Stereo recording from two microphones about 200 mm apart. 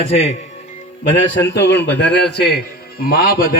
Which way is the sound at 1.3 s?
65° left (ahead or behind).